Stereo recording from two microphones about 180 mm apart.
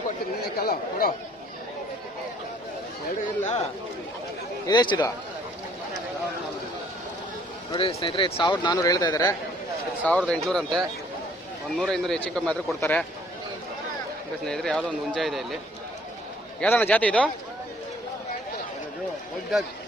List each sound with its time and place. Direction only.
0.4 s speech: 55° left (ahead or behind)
4.6 s speech: 25° left (ahead or behind)
7.7 s speech: 30° left (ahead or behind)
10.1 s speech: 5° left (ahead or behind)
14.4 s speech: 5° left (ahead or behind)
16.6 s a man's voice: 10° left (ahead or behind)
19.5 s speech: centre (ahead or behind)